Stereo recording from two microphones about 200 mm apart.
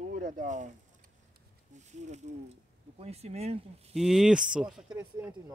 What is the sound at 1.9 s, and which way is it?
Speech, 35° right (ahead or behind).